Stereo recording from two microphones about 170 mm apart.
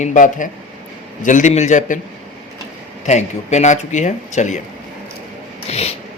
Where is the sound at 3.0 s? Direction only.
45° left (ahead or behind).